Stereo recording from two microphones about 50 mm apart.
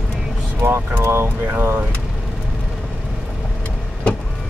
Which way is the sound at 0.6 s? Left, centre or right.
Right.